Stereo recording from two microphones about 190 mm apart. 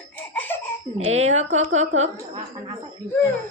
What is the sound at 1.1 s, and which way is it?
A woman's voice, 35° right (ahead or behind).